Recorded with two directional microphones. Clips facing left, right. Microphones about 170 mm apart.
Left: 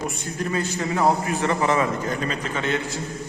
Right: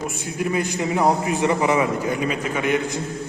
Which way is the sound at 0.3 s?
10° right (ahead or behind).